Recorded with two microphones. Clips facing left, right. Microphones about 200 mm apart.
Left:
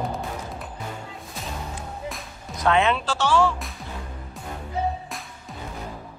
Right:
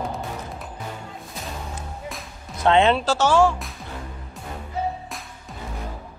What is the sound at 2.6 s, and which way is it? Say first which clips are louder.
Speech: right 4 dB; 30° right (ahead or behind).